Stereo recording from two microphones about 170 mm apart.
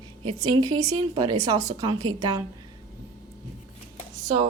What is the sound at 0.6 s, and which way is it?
Speech, 25° right (ahead or behind).